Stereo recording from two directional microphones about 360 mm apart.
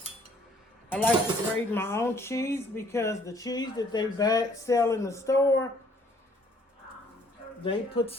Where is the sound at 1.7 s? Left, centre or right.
Centre.